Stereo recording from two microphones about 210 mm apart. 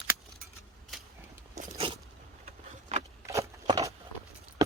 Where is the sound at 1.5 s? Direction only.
30° right (ahead or behind).